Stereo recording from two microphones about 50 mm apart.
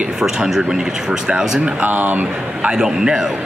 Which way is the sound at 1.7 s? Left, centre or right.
Right.